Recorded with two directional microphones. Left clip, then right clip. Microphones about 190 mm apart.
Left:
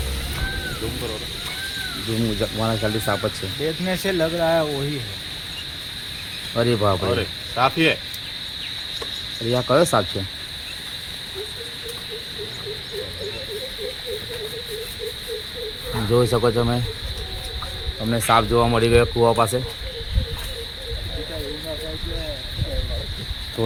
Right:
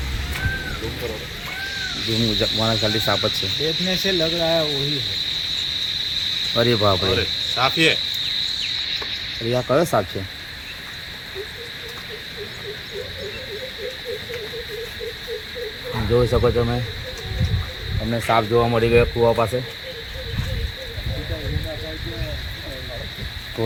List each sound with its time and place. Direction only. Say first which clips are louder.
2.1 s speech: right 4 dB; centre (ahead or behind)
3.8 s cricket: even; 20° left (ahead or behind)
6.5 s speech: right 1 dB; centre (ahead or behind)
7.2 s cricket: right 1 dB; 35° left (ahead or behind)
9.5 s cricket: left 1 dB; 5° left (ahead or behind)
16.1 s speech: even; centre (ahead or behind)
18.1 s speech: left 1 dB; 5° left (ahead or behind)